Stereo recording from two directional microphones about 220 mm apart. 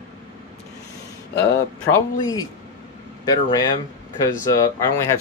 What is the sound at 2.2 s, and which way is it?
Speech, 20° left (ahead or behind).